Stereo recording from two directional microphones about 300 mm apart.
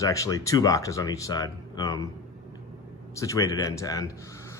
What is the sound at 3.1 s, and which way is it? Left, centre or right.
Speech, centre.